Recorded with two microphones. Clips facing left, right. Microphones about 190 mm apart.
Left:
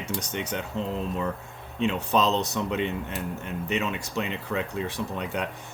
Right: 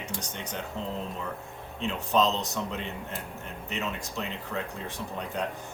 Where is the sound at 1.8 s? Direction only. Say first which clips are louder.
Left 2 dB; 65° left (ahead or behind).